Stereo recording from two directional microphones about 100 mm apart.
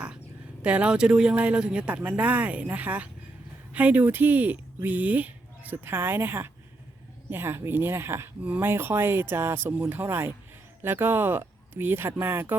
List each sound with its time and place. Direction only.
0.6 s speech: 10° right (ahead or behind)